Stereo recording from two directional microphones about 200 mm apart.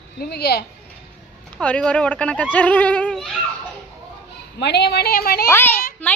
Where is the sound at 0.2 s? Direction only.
55° left (ahead or behind).